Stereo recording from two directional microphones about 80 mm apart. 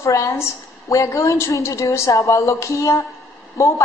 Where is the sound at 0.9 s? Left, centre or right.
Left.